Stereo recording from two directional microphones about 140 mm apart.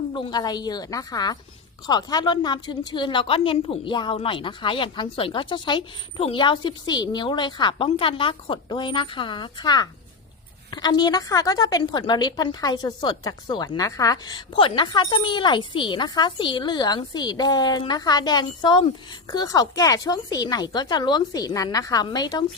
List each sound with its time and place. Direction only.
0.1 s a woman's voice: 35° left (ahead or behind)